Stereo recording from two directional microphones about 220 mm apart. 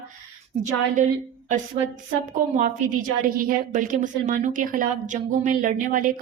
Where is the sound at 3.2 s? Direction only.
40° right (ahead or behind).